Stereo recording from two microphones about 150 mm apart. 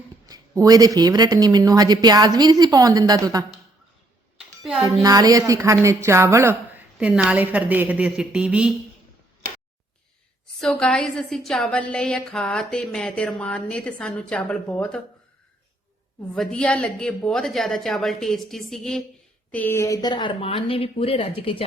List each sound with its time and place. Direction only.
0.3 s speech: 25° right (ahead or behind)
4.8 s a woman's voice: 25° right (ahead or behind); by 8.7 s 5° right (ahead or behind)
9.4 s a sound: 70° right (ahead or behind)
10.6 s a woman's voice: 5° left (ahead or behind)
16.3 s a woman's voice: 5° left (ahead or behind); by 21.6 s 40° left (ahead or behind)